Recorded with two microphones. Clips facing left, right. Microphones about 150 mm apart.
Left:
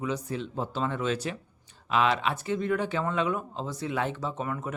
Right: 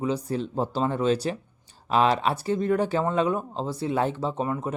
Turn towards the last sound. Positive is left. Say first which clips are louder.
# right 5 dB
turn(degrees=-30)  # may be behind; listen again after turning